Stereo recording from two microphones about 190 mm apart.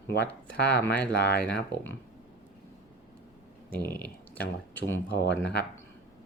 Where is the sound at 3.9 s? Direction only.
10° left (ahead or behind).